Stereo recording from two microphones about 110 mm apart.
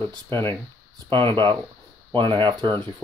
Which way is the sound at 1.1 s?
50° right (ahead or behind).